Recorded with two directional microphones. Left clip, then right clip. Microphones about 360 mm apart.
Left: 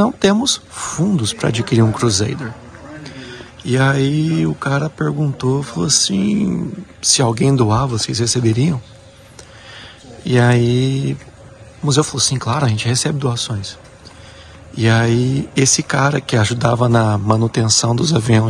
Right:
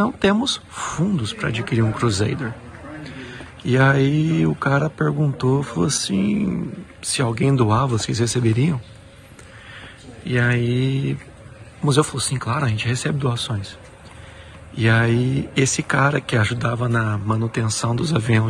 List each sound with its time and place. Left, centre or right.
0.0 s speech: centre
10.2 s speech: centre
14.8 s speech: centre